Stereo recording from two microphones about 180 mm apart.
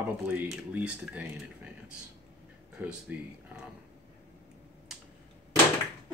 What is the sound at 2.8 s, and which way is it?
Speech, 5° right (ahead or behind).